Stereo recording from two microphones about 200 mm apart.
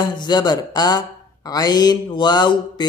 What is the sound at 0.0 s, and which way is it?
Speech, 20° left (ahead or behind).